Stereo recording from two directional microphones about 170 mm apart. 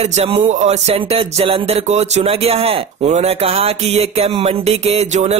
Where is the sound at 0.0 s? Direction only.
40° right (ahead or behind).